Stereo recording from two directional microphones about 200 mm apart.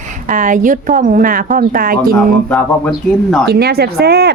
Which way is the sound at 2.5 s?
5° left (ahead or behind).